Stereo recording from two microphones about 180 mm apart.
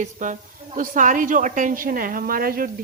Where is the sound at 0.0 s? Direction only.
45° right (ahead or behind).